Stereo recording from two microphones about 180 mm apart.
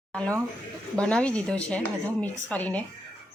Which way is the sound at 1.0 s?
5° left (ahead or behind).